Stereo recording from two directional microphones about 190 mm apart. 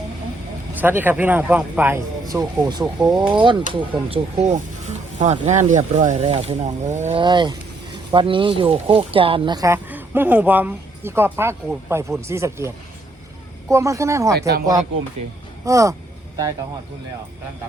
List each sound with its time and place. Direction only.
0.7 s speech: 10° right (ahead or behind)
2.2 s speech: 20° right (ahead or behind)
2.8 s speech: 5° right (ahead or behind)
3.3 s speech: 25° right (ahead or behind)
7.2 s speech: 25° right (ahead or behind)
14.3 s speech: 60° right (ahead or behind)
15.6 s speech: 15° right (ahead or behind)